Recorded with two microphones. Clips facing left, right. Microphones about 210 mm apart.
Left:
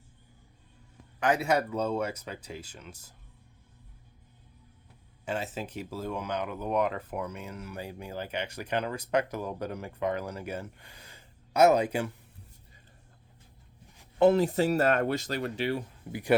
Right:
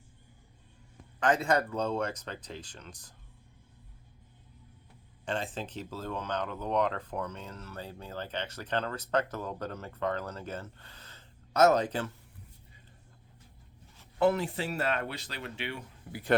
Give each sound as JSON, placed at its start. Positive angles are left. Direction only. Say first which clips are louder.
{"t": 1.2, "sound": "speech", "louder": "left 1 dB", "side_deg": 10}
{"t": 5.2, "sound": "speech", "louder": "left 1 dB", "side_deg": 5}
{"t": 13.9, "sound": "a sound", "louder": "left 5 dB", "side_deg": 15}
{"t": 14.3, "sound": "speech", "louder": "left 6 dB", "side_deg": 40}
{"t": 16.1, "sound": "speech", "louder": "left 2 dB", "side_deg": 25}